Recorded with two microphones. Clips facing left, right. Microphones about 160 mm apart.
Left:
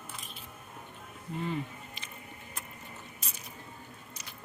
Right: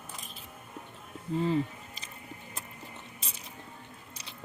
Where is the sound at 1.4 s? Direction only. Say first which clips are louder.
Right 6 dB; 30° right (ahead or behind).